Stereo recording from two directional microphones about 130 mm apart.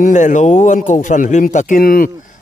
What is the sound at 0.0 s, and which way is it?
A man's voice, 75° left (ahead or behind).